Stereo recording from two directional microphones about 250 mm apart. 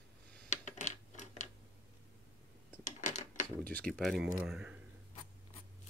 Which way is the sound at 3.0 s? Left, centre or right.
Left.